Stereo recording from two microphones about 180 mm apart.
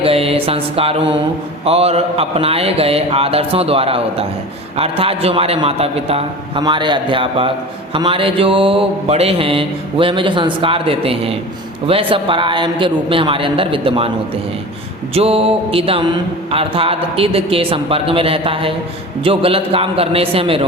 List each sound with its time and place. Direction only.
0.0 s mantra: 30° right (ahead or behind)
1.6 s a man's voice: 35° right (ahead or behind)
6.6 s mantra: 25° right (ahead or behind)
15.1 s a man's voice: 35° right (ahead or behind)